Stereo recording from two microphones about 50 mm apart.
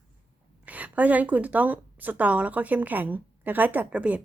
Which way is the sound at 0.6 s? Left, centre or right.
Right.